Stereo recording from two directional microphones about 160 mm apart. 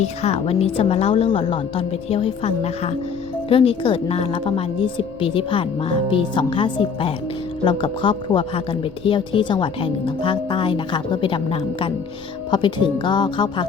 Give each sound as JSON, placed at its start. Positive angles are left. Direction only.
{"t": 0.0, "sound": "a woman's voice", "side_deg": 40}